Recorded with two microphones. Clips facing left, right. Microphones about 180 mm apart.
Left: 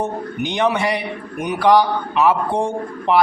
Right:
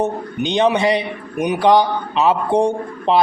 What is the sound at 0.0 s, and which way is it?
A man's voice, 20° right (ahead or behind).